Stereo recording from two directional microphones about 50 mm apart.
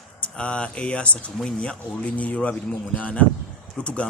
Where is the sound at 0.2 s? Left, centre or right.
Left.